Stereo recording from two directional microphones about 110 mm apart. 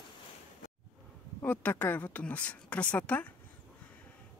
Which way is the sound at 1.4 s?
15° left (ahead or behind).